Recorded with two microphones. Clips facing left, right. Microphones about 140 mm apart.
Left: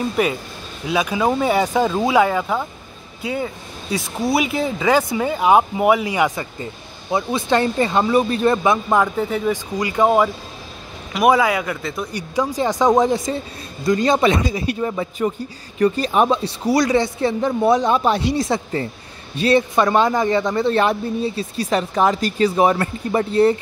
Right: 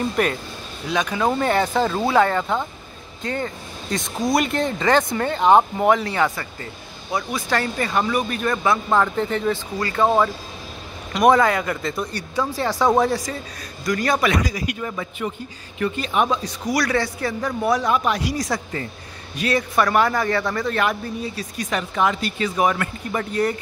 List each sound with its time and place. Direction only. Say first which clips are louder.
0.0 s speech: left 2 dB; 5° left (ahead or behind); by 8.7 s 30° left (ahead or behind)
8.9 s speech: left 2 dB; 10° left (ahead or behind)
12.1 s a man's voice: left 3 dB; 15° left (ahead or behind); by 23.5 s 30° left (ahead or behind)